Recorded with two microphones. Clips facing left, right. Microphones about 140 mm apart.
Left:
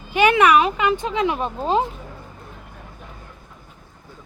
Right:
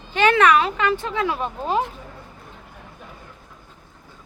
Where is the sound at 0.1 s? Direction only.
10° left (ahead or behind).